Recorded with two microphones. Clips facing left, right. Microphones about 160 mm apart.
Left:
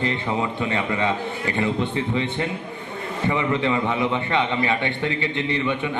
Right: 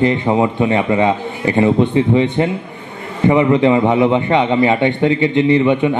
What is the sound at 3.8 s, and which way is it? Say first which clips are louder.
Speech: right 10 dB; 50° right (ahead or behind).